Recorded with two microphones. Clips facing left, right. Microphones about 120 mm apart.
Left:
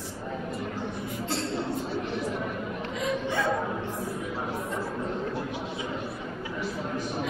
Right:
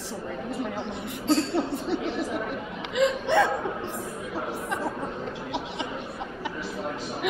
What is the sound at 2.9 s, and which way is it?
Hiccup, 85° right.